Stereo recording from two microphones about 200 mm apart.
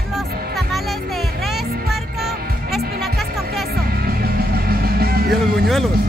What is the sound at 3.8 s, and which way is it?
Music, 50° right (ahead or behind).